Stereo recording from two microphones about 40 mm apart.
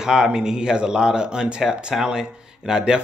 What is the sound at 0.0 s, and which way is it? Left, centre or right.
Speech, centre.